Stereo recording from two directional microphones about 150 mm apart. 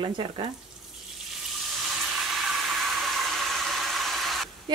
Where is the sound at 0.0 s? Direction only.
35° right (ahead or behind).